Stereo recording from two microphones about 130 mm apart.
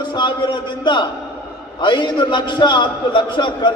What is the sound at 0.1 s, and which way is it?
A man's voice, 35° left (ahead or behind).